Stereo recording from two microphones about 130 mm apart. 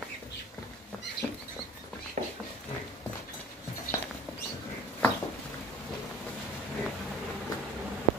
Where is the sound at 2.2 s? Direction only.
70° right (ahead or behind).